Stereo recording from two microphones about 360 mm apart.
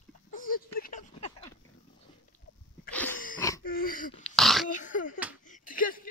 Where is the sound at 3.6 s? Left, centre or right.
Left.